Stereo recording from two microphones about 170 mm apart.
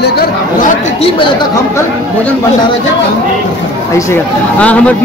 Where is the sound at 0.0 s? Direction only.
65° left (ahead or behind).